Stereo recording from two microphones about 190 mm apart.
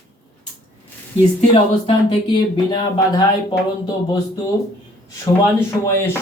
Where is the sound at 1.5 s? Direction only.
25° left (ahead or behind).